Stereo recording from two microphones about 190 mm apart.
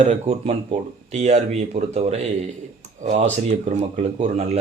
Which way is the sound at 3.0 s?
35° right (ahead or behind).